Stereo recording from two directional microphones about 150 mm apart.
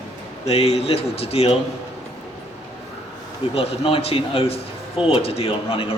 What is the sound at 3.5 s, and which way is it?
A man's voice, 40° left (ahead or behind).